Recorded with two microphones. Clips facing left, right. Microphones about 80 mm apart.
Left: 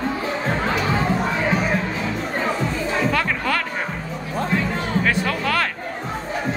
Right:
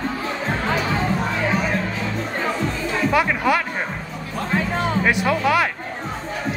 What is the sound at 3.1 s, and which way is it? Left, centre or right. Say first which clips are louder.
Music: right 3 dB; centre.